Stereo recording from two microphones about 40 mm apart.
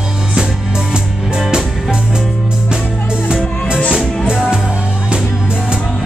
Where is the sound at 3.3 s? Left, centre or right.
Centre.